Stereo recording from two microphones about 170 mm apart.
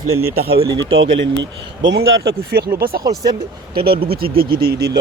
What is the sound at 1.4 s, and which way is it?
Speech, 90° right.